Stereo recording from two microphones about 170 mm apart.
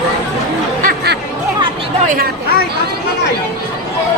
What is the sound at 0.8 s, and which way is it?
Music, 75° right (ahead or behind).